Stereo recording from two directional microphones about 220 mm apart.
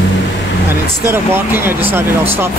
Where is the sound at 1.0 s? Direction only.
10° right (ahead or behind).